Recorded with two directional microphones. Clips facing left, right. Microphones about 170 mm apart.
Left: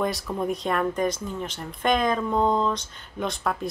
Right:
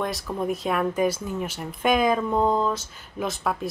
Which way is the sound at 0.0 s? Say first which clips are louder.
Left 1 dB; centre (ahead or behind).